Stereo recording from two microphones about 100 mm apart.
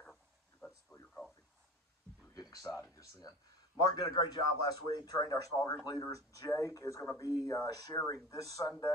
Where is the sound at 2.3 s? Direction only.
40° left (ahead or behind).